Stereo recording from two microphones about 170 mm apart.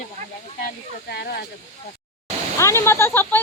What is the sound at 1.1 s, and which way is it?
Speech, 70° left (ahead or behind).